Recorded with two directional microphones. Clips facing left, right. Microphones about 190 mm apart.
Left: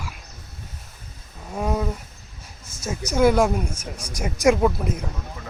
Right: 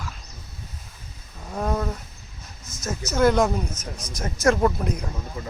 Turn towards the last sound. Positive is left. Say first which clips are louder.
# left 1 dB
turn(degrees=5)  # may be behind; listen again after turning